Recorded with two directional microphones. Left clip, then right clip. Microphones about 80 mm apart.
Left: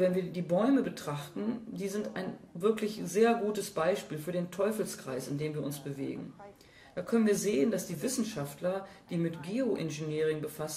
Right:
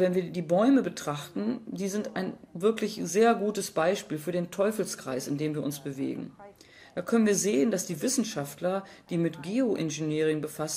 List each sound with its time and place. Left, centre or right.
0.0 s speech: right